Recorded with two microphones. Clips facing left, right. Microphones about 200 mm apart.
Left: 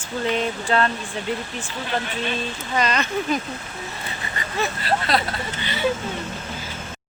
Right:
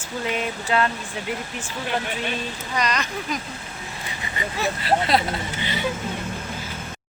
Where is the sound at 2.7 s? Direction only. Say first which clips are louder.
Left 3 dB; 30° left (ahead or behind).